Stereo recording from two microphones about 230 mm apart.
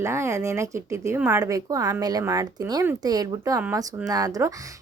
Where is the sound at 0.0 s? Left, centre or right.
Centre.